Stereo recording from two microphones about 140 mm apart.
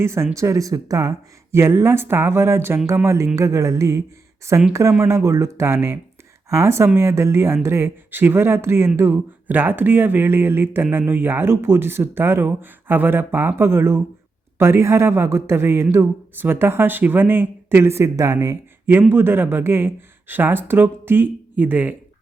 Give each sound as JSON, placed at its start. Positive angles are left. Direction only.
{"t": 0.0, "sound": "speech", "side_deg": -20}